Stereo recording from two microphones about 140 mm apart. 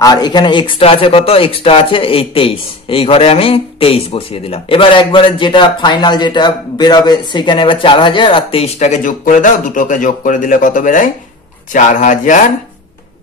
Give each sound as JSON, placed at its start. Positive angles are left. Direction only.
{"t": 0.0, "sound": "speech", "side_deg": 30}